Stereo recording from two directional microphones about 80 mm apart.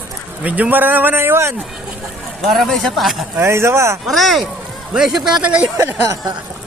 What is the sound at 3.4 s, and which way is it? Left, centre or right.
Speech, right.